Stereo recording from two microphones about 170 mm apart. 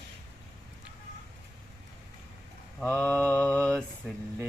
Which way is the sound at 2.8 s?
10° left (ahead or behind).